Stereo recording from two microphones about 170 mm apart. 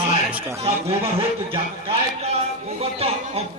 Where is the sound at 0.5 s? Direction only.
35° right (ahead or behind).